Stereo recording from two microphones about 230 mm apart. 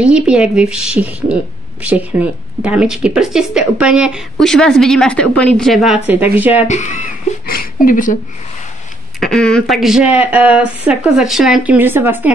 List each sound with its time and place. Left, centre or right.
0.0 s a woman's voice: centre
6.6 s speech: left
9.2 s a woman's voice: centre